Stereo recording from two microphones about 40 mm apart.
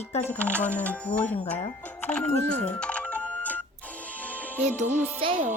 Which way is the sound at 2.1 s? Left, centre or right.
Left.